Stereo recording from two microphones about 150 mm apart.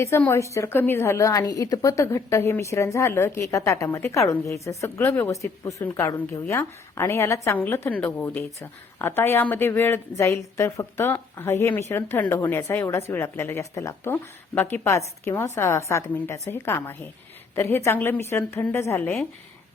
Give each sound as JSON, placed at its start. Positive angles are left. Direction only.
{"t": 0.3, "sound": "a woman's voice", "side_deg": 20}